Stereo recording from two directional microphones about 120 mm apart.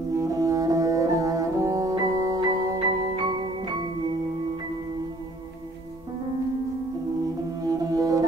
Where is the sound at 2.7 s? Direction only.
45° right (ahead or behind).